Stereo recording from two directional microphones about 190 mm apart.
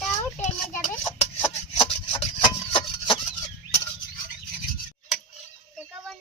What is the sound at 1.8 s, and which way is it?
Rub, 30° left (ahead or behind).